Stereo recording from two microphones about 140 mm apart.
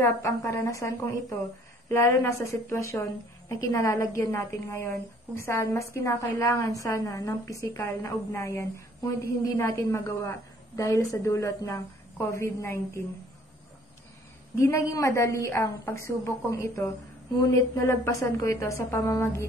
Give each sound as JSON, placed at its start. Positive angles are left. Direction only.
{"t": 0.0, "sound": "a woman's voice", "side_deg": 20}
{"t": 14.6, "sound": "a woman's voice", "side_deg": 20}